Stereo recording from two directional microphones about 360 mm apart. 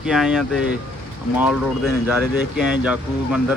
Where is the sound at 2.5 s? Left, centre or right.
Centre.